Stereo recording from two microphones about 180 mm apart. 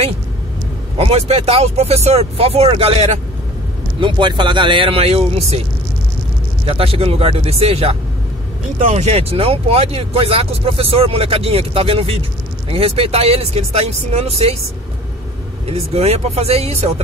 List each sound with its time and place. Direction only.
0.9 s speech: 35° right (ahead or behind)
6.6 s speech: 30° right (ahead or behind)
15.6 s speech: 35° right (ahead or behind)